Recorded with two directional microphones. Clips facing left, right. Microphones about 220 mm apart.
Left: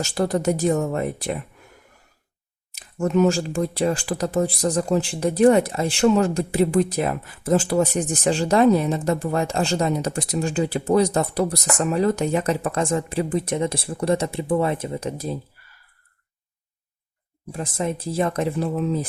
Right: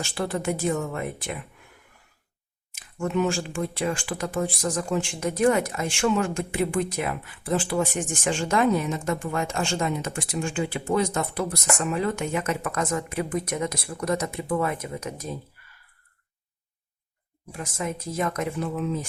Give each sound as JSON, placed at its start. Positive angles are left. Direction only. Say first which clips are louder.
{"t": 0.0, "sound": "speech", "louder": "left 6 dB", "side_deg": 40}
{"t": 2.7, "sound": "speech", "louder": "left 6 dB", "side_deg": 40}
{"t": 17.5, "sound": "speech", "louder": "left 5 dB", "side_deg": 30}